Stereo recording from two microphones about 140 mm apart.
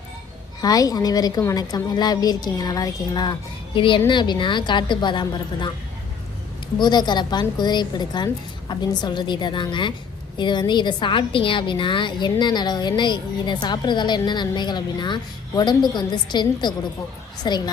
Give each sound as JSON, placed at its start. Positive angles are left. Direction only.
{"t": 0.6, "sound": "a woman's voice", "side_deg": 25}
{"t": 6.7, "sound": "a woman's voice", "side_deg": 30}